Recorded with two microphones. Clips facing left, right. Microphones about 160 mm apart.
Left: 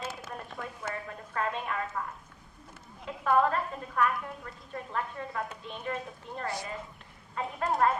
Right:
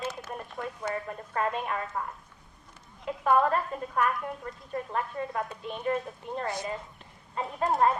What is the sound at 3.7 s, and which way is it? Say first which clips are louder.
Speech: right 5 dB; 10° right (ahead or behind).